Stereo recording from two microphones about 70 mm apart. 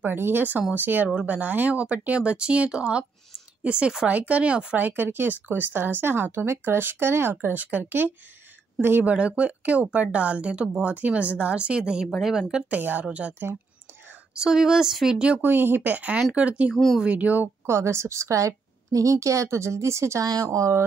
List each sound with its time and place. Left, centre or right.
0.0 s speech: right
4.7 s speech: right
14.3 s speech: centre
15.2 s speech: right
16.7 s speech: centre
17.0 s speech: centre
17.6 s a woman's voice: right